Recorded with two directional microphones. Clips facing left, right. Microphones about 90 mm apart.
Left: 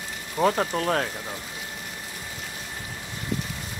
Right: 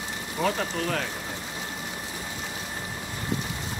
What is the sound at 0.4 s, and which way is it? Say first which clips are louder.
Speech: left 4 dB; 40° left (ahead or behind).